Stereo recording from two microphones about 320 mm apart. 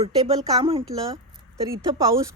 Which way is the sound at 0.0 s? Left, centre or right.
Centre.